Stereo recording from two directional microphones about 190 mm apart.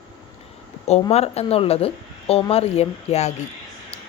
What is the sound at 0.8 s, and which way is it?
A woman's voice, 35° left (ahead or behind).